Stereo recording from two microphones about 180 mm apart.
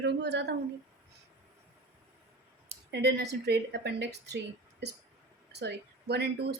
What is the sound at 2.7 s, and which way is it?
A woman's voice, 65° right (ahead or behind).